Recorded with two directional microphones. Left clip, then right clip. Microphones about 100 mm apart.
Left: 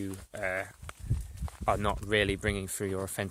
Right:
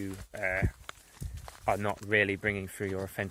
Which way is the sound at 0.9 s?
5° right (ahead or behind).